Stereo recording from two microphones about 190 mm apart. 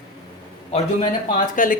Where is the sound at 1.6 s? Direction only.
45° left (ahead or behind).